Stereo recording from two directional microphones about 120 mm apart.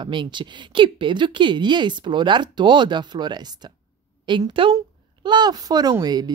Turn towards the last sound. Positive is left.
turn(degrees=-35)  # may be behind; listen again after turning